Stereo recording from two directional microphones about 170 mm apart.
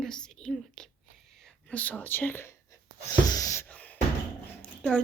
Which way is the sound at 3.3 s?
20° left (ahead or behind).